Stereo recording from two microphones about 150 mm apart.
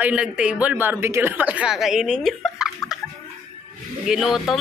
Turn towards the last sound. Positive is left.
turn(degrees=0)  # may be behind; listen again after turning